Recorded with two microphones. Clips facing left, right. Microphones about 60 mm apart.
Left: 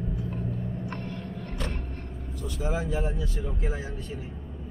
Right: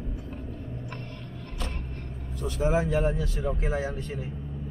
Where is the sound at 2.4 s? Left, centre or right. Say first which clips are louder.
Right 5 dB; right.